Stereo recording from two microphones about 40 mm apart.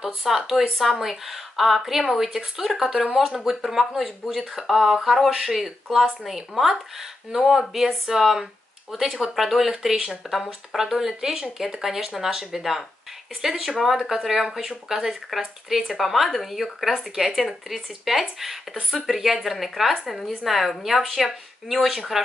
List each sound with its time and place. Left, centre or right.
0.0 s speech: centre